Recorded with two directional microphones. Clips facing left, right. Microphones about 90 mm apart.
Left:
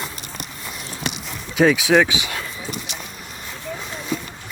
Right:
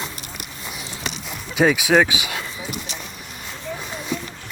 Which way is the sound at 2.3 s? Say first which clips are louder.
Even; 5° right (ahead or behind).